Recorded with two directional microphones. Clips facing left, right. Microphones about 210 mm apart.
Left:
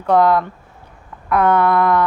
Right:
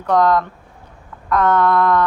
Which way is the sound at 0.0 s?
10° left (ahead or behind).